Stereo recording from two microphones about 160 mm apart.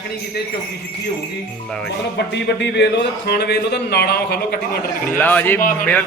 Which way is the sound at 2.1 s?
90° left.